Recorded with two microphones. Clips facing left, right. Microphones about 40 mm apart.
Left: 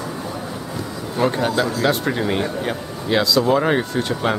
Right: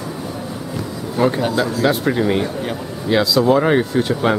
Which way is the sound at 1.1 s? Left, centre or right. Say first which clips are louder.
Right 2 dB; centre.